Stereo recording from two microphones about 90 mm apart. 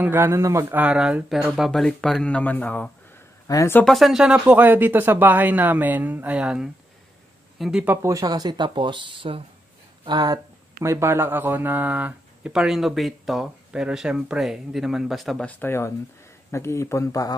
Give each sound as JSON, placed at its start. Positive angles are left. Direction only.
{"t": 0.0, "sound": "speech", "side_deg": -25}
{"t": 0.7, "sound": "speech", "side_deg": -10}
{"t": 3.5, "sound": "speech", "side_deg": 40}
{"t": 3.8, "sound": "speech", "side_deg": 0}
{"t": 8.0, "sound": "speech", "side_deg": -40}
{"t": 10.0, "sound": "speech", "side_deg": -50}
{"t": 10.8, "sound": "speech", "side_deg": -30}
{"t": 12.5, "sound": "speech", "side_deg": -5}
{"t": 15.4, "sound": "speech", "side_deg": 25}